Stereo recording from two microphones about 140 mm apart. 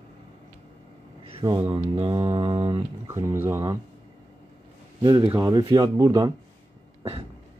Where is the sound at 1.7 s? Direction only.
40° right (ahead or behind).